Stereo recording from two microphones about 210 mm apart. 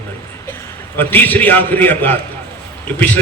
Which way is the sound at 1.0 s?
10° left (ahead or behind).